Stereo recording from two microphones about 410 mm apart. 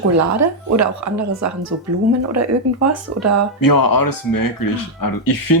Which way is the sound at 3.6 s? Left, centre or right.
Left.